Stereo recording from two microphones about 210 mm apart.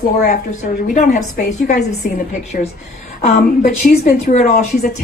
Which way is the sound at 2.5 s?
40° left (ahead or behind).